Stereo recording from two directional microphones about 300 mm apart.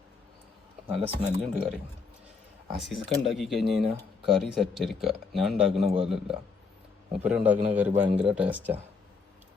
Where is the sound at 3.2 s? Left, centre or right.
Centre.